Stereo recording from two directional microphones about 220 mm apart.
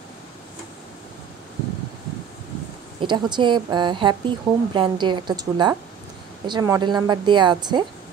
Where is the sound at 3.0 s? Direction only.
20° right (ahead or behind).